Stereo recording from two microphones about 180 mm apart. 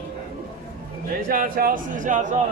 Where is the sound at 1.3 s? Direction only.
50° right (ahead or behind).